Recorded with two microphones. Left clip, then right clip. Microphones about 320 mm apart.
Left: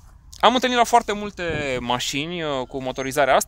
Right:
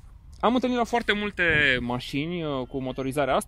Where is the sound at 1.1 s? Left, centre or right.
Centre.